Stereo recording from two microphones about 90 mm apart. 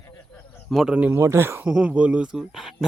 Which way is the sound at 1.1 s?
30° right (ahead or behind).